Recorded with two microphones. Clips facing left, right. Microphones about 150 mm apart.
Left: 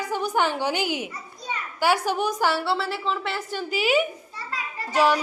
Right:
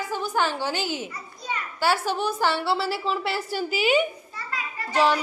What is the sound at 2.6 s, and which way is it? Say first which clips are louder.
A woman's voice: right 1 dB; 5° right (ahead or behind).